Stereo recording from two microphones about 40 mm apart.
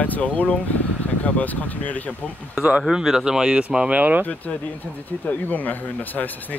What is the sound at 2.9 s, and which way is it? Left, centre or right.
Speech, centre.